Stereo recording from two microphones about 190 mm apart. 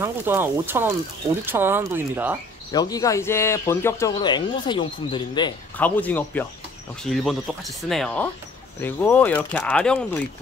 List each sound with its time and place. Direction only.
0.0 s speech: 10° right (ahead or behind)
2.7 s speech: 20° left (ahead or behind)
5.8 s speech: 10° left (ahead or behind)